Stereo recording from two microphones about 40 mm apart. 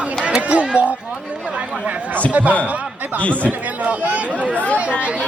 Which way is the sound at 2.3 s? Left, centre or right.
Right.